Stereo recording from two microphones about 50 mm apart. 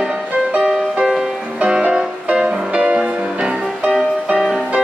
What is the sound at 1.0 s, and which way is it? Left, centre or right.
Music, centre.